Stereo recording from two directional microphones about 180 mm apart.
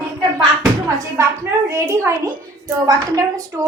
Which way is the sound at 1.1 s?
15° right (ahead or behind).